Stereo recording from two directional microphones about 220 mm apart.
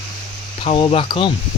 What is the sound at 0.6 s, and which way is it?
Speech, 25° left (ahead or behind).